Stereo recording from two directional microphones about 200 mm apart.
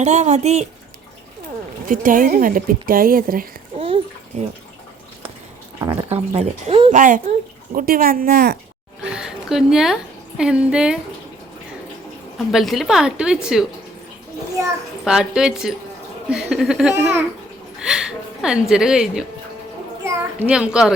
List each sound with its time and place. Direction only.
0.0 s speech: 35° right (ahead or behind)
1.9 s speech: 45° right (ahead or behind)
3.8 s bathtub: 30° right (ahead or behind)
4.3 s speech: 35° right (ahead or behind)
5.9 s speech: 30° right (ahead or behind)
6.9 s speech: 40° right (ahead or behind)
9.0 s a sound: 5° right (ahead or behind)
12.5 s a woman's voice: centre (ahead or behind)
15.0 s a woman's voice: 5° right (ahead or behind)
17.7 s a sound: 5° right (ahead or behind)
18.7 s a woman's voice: 5° right (ahead or behind)